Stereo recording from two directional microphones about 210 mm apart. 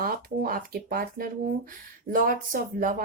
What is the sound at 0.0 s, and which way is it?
Speech, 45° right (ahead or behind).